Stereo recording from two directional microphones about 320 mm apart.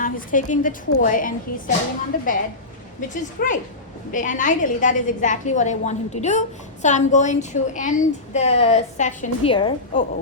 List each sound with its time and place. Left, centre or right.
0.0 s speech: left